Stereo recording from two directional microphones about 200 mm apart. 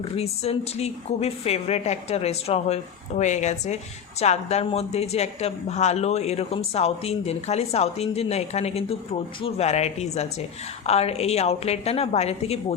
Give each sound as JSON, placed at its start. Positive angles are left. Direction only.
{"t": 0.2, "sound": "speech", "side_deg": 30}